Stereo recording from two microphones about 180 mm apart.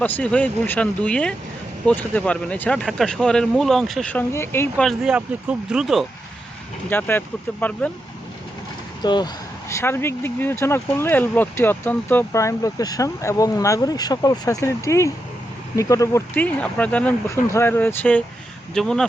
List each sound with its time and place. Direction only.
0.0 s speech: 5° left (ahead or behind)
4.8 s speech: centre (ahead or behind)
6.9 s speech: 10° left (ahead or behind)
9.0 s speech: 25° left (ahead or behind); by 19.0 s 5° left (ahead or behind)